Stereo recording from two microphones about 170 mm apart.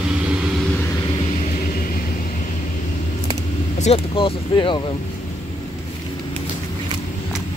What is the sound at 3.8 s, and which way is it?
Speech, 35° left (ahead or behind).